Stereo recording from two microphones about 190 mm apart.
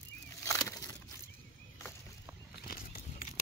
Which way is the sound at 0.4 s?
15° left (ahead or behind).